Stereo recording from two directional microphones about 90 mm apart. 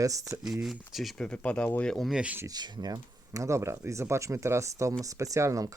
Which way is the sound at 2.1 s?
15° right (ahead or behind).